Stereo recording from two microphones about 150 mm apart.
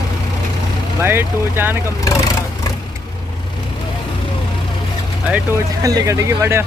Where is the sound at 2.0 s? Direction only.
20° left (ahead or behind).